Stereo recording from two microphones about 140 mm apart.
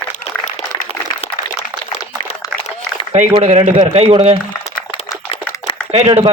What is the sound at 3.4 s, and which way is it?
Speech, 55° right (ahead or behind).